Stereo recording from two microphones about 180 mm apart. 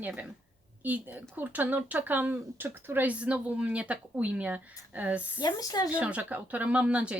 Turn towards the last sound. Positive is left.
turn(degrees=-5)  # may be behind; listen again after turning